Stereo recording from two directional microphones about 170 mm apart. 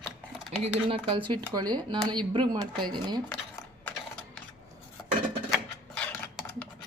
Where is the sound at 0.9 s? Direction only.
30° right (ahead or behind).